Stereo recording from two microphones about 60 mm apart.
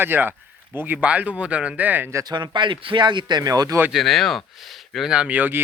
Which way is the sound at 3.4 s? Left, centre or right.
Right.